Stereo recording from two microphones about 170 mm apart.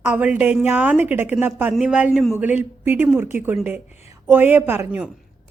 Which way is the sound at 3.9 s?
40° left (ahead or behind).